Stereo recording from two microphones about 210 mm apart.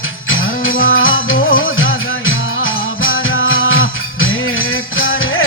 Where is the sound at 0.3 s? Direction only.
70° left (ahead or behind).